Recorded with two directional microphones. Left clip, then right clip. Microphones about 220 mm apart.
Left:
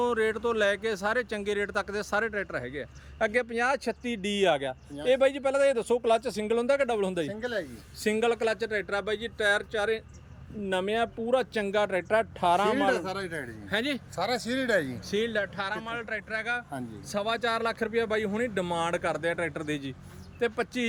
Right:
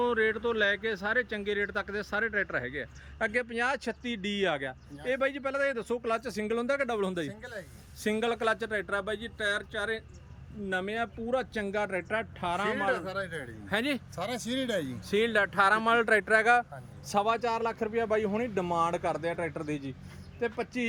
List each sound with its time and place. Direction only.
0.0 s speech: 5° left (ahead or behind)
12.9 s speech: 30° left (ahead or behind)
13.7 s speech: centre (ahead or behind)
15.1 s speech: 10° right (ahead or behind)
17.1 s speech: centre (ahead or behind)